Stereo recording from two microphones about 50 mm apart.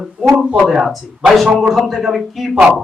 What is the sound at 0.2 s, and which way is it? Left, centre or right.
Speech, centre.